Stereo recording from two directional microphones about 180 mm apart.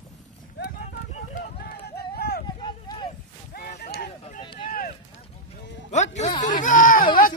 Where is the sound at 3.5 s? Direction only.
60° left (ahead or behind).